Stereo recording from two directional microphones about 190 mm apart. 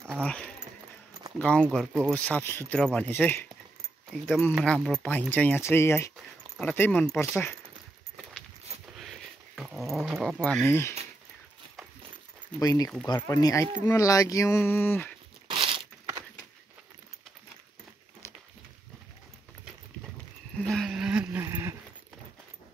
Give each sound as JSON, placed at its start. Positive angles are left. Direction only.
{"t": 0.1, "sound": "speech", "side_deg": 5}
{"t": 8.8, "sound": "dog", "side_deg": 0}
{"t": 12.5, "sound": "speech", "side_deg": 20}
{"t": 15.4, "sound": "crumpling", "side_deg": -30}
{"t": 18.2, "sound": "walk", "side_deg": 15}
{"t": 20.6, "sound": "a sound", "side_deg": 0}